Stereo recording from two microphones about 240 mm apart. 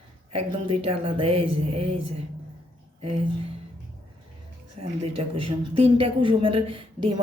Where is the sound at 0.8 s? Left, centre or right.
Right.